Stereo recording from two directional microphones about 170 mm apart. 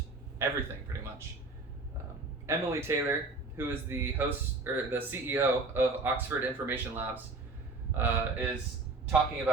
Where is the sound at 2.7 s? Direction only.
15° right (ahead or behind).